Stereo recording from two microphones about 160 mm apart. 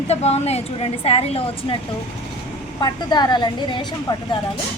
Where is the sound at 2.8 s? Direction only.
25° left (ahead or behind).